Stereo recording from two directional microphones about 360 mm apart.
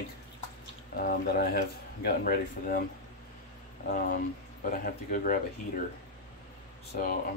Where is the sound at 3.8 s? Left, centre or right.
Left.